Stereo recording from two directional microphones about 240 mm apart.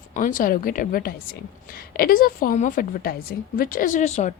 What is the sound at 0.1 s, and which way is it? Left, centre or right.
A woman's voice, left.